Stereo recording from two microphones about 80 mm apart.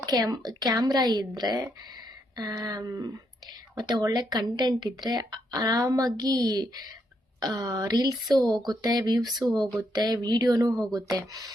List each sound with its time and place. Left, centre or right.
0.0 s a woman's voice: right
3.8 s a woman's voice: right
9.5 s speech: centre
9.9 s speech: right